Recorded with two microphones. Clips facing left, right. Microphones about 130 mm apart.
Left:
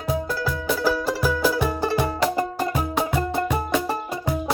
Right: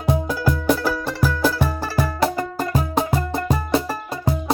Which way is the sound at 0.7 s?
5° left (ahead or behind).